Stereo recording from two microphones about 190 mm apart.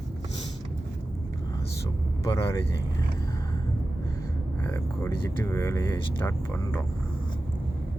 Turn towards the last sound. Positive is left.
turn(degrees=10)  # may be behind; listen again after turning